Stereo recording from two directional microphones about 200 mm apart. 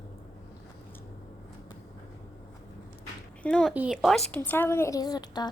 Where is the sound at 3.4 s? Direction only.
5° left (ahead or behind).